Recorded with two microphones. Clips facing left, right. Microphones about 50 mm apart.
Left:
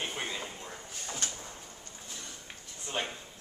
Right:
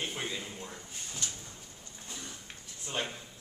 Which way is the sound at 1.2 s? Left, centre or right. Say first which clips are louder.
Left 1 dB; left.